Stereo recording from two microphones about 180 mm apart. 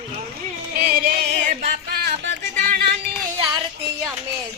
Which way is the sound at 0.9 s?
50° right (ahead or behind).